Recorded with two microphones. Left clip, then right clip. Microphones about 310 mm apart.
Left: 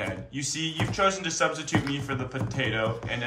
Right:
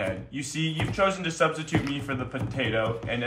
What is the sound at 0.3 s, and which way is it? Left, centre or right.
Speech, right.